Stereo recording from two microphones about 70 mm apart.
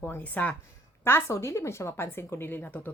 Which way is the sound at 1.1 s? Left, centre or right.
Left.